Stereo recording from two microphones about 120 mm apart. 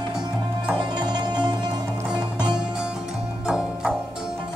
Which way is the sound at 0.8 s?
40° right (ahead or behind).